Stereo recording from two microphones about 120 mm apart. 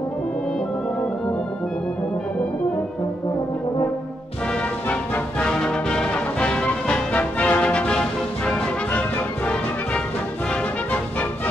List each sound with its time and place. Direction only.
4.8 s music: 10° left (ahead or behind)